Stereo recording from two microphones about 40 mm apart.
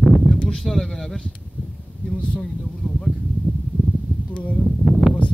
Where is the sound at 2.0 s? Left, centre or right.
Left.